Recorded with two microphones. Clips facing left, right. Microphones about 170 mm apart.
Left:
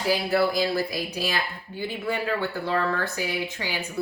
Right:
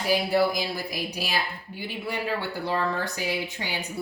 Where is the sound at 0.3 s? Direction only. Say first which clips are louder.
Left 1 dB; 15° right (ahead or behind).